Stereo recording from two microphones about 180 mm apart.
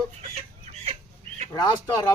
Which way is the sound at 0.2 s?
35° right (ahead or behind).